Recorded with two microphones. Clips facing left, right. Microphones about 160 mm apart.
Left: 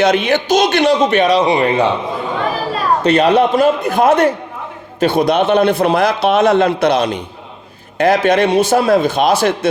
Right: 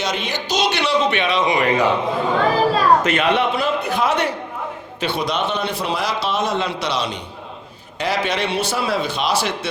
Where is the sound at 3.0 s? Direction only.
35° left (ahead or behind).